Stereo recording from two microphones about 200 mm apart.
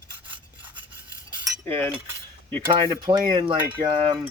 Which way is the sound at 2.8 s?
25° right (ahead or behind).